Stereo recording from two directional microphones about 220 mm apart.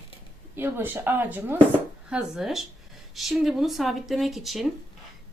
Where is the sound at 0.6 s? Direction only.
10° right (ahead or behind).